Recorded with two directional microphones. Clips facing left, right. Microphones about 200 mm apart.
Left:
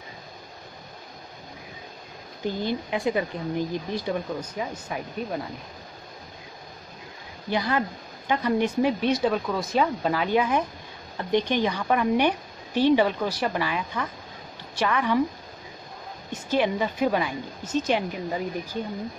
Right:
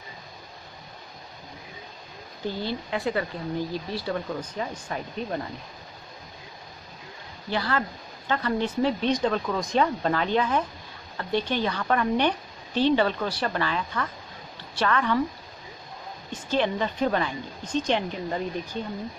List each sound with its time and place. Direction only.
2.4 s speech: 15° left (ahead or behind)
7.4 s speech: 15° left (ahead or behind)
16.3 s speech: 10° left (ahead or behind)